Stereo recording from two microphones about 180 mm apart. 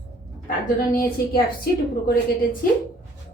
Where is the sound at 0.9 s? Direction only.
55° left (ahead or behind).